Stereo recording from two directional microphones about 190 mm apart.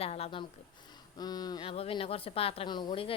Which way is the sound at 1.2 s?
20° left (ahead or behind).